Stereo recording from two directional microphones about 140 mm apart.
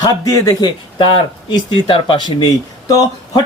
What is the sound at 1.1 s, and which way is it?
A man's voice, 35° left (ahead or behind).